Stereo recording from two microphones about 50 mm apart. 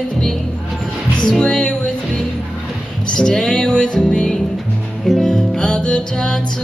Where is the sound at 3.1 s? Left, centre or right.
Centre.